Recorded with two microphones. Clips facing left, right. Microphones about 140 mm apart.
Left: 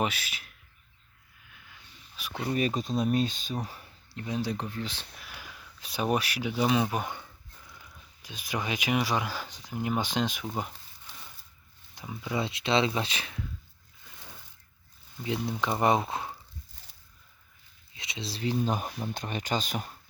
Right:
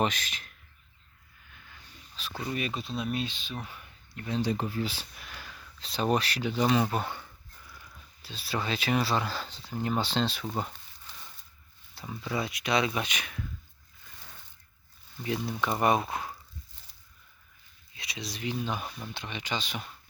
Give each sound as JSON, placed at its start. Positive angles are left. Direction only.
{"t": 0.0, "sound": "speech", "side_deg": 10}
{"t": 1.5, "sound": "a sound", "side_deg": 5}
{"t": 2.5, "sound": "speech", "side_deg": 40}
{"t": 4.3, "sound": "speech", "side_deg": 5}
{"t": 5.3, "sound": "speech", "side_deg": 10}
{"t": 10.4, "sound": "a sound", "side_deg": 5}
{"t": 11.9, "sound": "speech", "side_deg": 15}
{"t": 12.4, "sound": "speech", "side_deg": 25}
{"t": 15.2, "sound": "speech", "side_deg": 20}
{"t": 17.9, "sound": "speech", "side_deg": 25}